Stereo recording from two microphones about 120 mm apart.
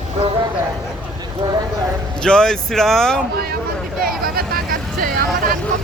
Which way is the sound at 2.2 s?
5° left (ahead or behind).